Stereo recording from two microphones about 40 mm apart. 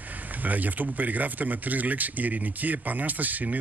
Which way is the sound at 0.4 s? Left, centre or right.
Right.